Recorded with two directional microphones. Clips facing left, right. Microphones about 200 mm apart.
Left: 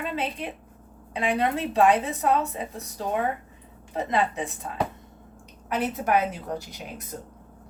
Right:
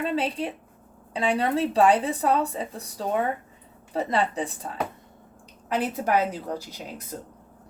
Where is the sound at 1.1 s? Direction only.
30° right (ahead or behind).